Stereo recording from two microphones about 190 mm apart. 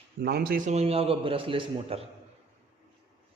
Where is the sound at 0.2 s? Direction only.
55° right (ahead or behind); by 2.0 s 25° right (ahead or behind).